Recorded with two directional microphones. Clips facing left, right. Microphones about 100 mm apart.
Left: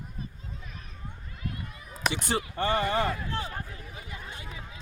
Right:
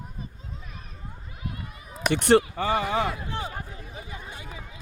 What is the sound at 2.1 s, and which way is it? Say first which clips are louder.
Speech: right 15 dB; 70° right (ahead or behind).